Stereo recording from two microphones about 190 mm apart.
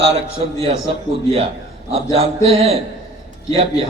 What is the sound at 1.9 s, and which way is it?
A man's voice, 30° right (ahead or behind).